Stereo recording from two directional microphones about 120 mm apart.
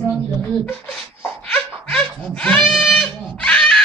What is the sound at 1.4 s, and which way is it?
Laughter, 10° left (ahead or behind).